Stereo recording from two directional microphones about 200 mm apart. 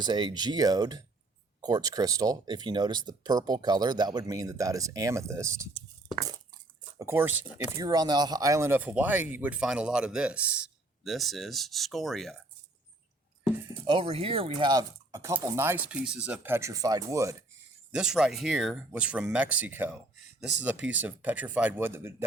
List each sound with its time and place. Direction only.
0.0 s speech: 20° right (ahead or behind)
7.0 s speech: 10° right (ahead or behind)
13.8 s speech: 25° right (ahead or behind)
17.9 s speech: 5° right (ahead or behind)